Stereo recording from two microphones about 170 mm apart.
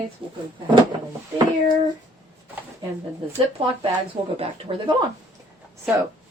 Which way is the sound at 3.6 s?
35° right (ahead or behind).